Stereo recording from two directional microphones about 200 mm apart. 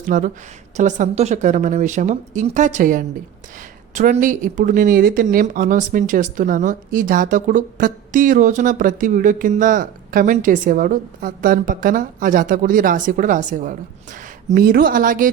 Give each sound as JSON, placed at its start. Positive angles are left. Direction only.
{"t": 0.1, "sound": "a woman's voice", "side_deg": -45}